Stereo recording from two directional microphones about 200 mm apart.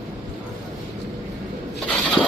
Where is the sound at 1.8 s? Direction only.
5° left (ahead or behind).